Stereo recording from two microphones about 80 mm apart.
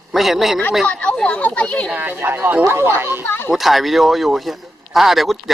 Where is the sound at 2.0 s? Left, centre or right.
Right.